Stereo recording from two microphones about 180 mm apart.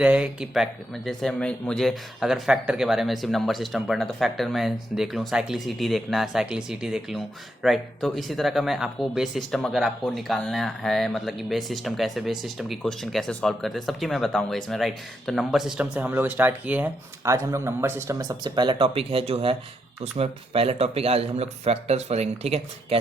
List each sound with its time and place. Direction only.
0.0 s speech: 5° right (ahead or behind); by 23.0 s 35° right (ahead or behind)